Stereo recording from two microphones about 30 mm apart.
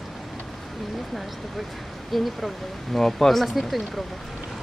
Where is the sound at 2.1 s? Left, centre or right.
Centre.